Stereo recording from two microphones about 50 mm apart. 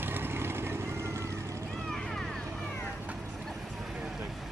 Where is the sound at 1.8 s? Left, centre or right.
Centre.